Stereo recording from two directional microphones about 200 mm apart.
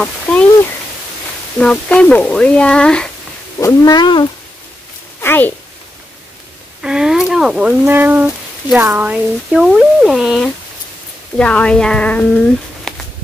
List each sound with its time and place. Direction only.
0.0 s speech: 5° left (ahead or behind)
1.6 s speech: 5° left (ahead or behind)
3.5 s speech: 15° left (ahead or behind)
5.2 s a woman's voice: 10° left (ahead or behind)
6.8 s speech: 5° right (ahead or behind)
12.9 s a sound: 5° left (ahead or behind)